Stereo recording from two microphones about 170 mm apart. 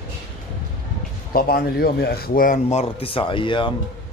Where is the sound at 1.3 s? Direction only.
65° left (ahead or behind).